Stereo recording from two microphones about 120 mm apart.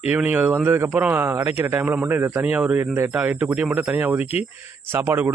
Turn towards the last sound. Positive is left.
turn(degrees=-15)  # may be behind; listen again after turning